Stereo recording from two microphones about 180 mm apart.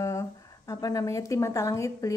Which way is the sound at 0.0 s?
15° left (ahead or behind).